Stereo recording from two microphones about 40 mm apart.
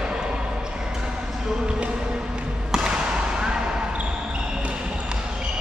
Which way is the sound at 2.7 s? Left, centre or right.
Centre.